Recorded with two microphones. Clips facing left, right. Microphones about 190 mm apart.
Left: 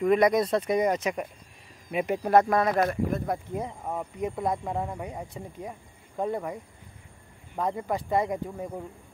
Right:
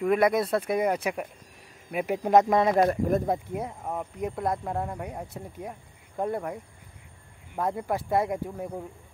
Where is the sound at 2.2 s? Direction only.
20° right (ahead or behind).